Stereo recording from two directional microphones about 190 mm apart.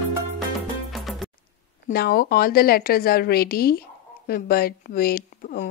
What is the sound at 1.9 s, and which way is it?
Speech, 55° left (ahead or behind).